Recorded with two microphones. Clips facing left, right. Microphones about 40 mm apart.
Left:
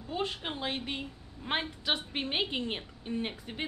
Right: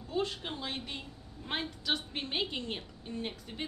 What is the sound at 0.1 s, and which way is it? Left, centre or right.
A woman's voice, left.